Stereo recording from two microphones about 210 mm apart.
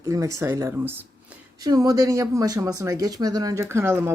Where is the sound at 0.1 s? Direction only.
15° right (ahead or behind).